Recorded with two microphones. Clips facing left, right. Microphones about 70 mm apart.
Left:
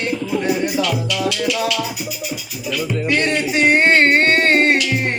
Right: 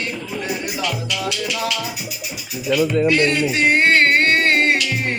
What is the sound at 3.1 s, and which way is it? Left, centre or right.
Music, centre.